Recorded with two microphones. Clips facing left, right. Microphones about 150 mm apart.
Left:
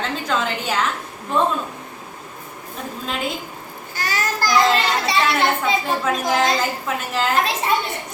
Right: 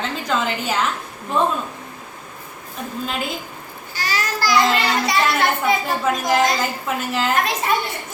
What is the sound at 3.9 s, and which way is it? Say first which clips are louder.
Babbling: even; 50° left (ahead or behind).